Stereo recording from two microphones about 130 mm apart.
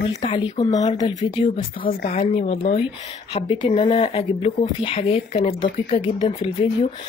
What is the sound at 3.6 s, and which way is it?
Speech, 40° left (ahead or behind).